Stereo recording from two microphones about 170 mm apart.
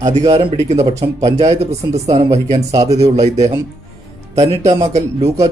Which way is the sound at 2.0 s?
20° right (ahead or behind).